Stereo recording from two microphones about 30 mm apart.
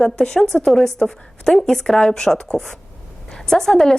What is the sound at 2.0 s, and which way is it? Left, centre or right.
A woman's voice, left.